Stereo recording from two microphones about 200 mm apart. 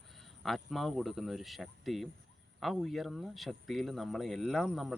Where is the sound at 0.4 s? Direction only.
Centre (ahead or behind).